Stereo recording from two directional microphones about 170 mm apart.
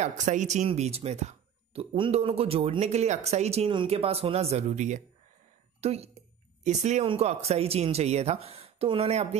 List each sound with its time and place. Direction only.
0.0 s a woman's voice: 45° right (ahead or behind)